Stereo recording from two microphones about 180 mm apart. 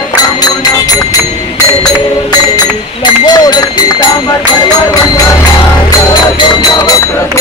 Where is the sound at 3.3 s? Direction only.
20° left (ahead or behind).